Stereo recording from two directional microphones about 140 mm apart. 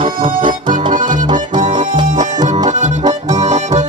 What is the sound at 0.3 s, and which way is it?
Music, 70° right (ahead or behind).